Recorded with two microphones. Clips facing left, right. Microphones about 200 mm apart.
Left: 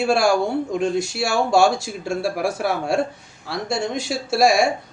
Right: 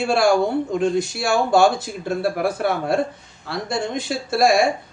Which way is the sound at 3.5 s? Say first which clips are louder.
Even; 60° right (ahead or behind).